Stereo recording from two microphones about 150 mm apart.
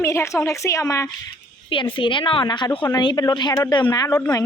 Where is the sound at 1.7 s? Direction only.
35° left (ahead or behind).